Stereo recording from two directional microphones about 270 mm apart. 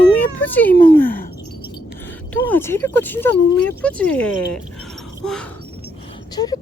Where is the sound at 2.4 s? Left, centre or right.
Centre.